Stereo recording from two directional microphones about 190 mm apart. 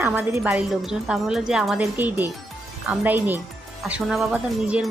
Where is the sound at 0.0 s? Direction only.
10° right (ahead or behind).